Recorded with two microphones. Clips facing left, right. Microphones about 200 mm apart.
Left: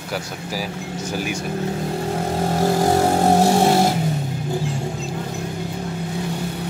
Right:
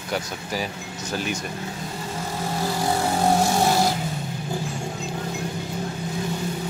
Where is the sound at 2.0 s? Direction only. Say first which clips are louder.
Left 6 dB; 60° left (ahead or behind).